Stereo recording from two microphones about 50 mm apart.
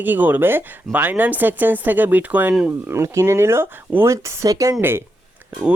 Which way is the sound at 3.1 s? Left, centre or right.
Right.